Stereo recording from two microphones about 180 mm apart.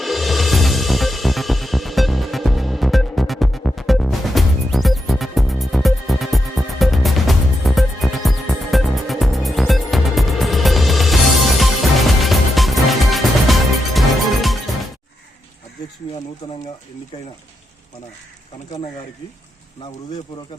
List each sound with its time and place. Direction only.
0.0 s music: centre (ahead or behind)
16.4 s speech: 25° left (ahead or behind)